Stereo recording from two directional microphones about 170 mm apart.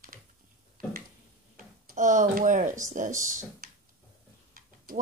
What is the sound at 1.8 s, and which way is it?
Speech, 45° right (ahead or behind).